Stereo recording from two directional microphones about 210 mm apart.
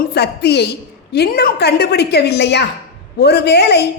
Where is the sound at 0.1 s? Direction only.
50° left (ahead or behind).